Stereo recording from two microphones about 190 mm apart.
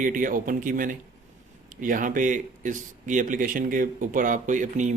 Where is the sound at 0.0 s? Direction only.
45° right (ahead or behind).